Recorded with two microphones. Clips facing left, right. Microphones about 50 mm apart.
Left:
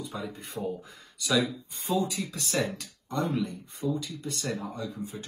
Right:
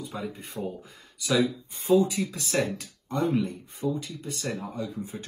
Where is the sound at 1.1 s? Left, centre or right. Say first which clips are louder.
Right 1 dB; centre.